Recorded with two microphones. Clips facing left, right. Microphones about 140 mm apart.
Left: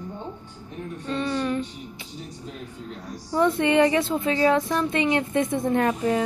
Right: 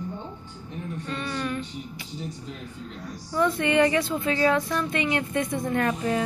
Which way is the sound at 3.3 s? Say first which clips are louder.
Left 2 dB; 25° left (ahead or behind).